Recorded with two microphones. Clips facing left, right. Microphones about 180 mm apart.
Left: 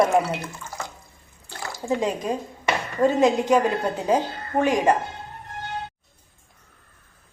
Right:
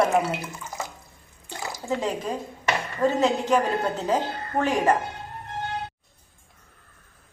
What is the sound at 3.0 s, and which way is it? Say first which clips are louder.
A woman's voice: left 4 dB; 15° left (ahead or behind).